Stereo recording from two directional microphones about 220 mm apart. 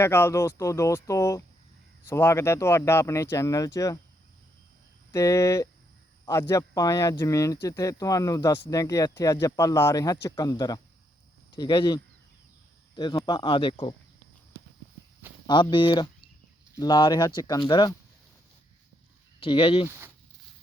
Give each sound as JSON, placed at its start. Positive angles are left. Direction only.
{"t": 0.0, "sound": "speech", "side_deg": 10}
{"t": 5.1, "sound": "speech", "side_deg": 15}
{"t": 13.0, "sound": "speech", "side_deg": 20}
{"t": 15.4, "sound": "speech", "side_deg": 20}
{"t": 19.4, "sound": "speech", "side_deg": 25}